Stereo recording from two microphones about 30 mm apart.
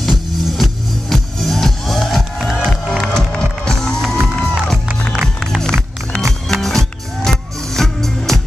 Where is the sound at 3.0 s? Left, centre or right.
Left.